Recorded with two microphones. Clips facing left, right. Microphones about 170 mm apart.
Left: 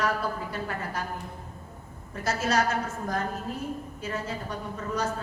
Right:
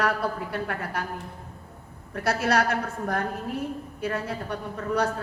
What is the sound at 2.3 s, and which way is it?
A woman's voice, 65° right (ahead or behind).